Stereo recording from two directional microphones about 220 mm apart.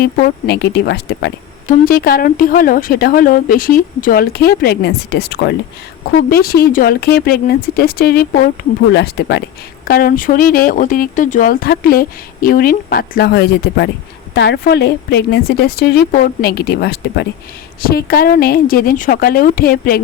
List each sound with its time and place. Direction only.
0.0 s a woman's voice: 45° left (ahead or behind)